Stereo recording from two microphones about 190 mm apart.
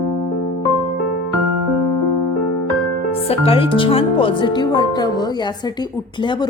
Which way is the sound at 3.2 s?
30° left (ahead or behind).